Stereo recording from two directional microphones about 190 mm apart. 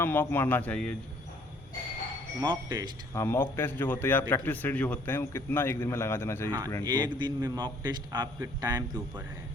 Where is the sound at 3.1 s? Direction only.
15° left (ahead or behind).